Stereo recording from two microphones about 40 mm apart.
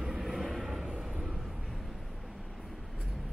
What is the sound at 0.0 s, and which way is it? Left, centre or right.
Vehicle, centre.